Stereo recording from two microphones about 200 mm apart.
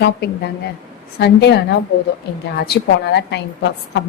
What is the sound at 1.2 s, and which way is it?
A woman's voice, 55° left (ahead or behind).